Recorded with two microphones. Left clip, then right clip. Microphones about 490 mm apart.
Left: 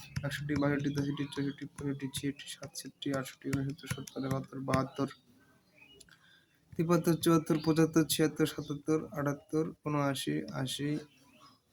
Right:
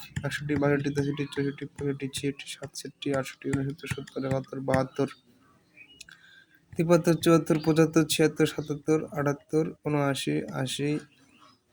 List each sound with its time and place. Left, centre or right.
0.0 s speech: left
6.7 s speech: left